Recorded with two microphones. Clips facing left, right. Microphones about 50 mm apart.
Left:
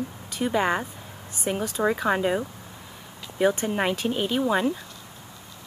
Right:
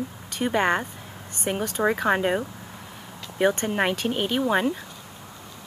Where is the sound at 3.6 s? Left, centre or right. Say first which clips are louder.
Right 1 dB; centre.